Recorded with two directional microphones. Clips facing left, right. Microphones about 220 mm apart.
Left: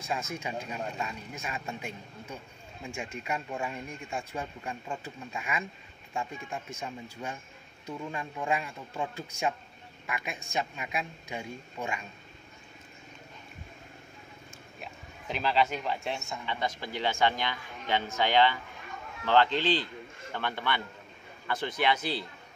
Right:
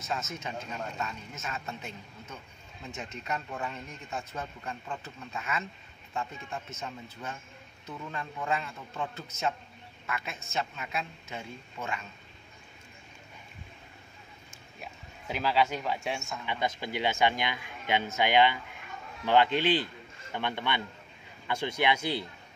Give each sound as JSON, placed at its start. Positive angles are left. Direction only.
{"t": 0.0, "sound": "speech", "side_deg": 10}
{"t": 14.8, "sound": "speech", "side_deg": -10}
{"t": 16.4, "sound": "speech", "side_deg": -15}